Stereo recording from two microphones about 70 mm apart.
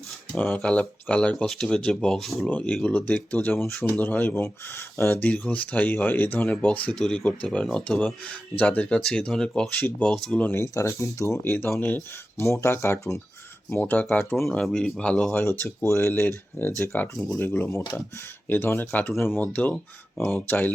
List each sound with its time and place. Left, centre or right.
0.3 s speech: left; by 2.3 s centre
2.5 s speech: left
5.2 s speech: left
7.0 s speech: centre
9.0 s speech: centre
9.7 s speech: left
10.1 s speech: centre
10.5 s speech: left
11.8 s speech: left
12.4 s speech: left
13.7 s speech: left
14.6 s speech: centre
15.3 s speech: left